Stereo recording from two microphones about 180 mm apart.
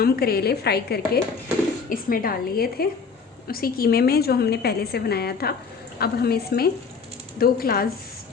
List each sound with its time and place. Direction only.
0.0 s a woman's voice: 60° left (ahead or behind)